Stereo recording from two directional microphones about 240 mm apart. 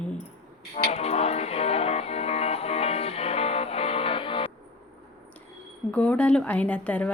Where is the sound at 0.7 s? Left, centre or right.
Left.